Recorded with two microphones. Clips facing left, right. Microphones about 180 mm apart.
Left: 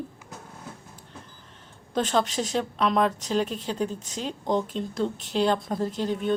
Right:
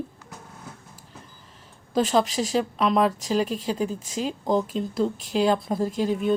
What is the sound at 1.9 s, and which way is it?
A woman's voice, 5° right (ahead or behind).